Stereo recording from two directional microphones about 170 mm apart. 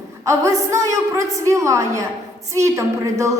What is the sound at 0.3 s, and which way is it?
A woman's voice, 20° right (ahead or behind).